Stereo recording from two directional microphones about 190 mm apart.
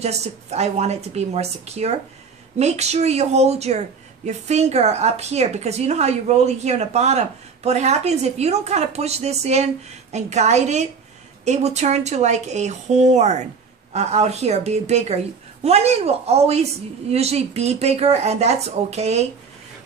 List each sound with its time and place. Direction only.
0.0 s a woman's voice: 35° right (ahead or behind)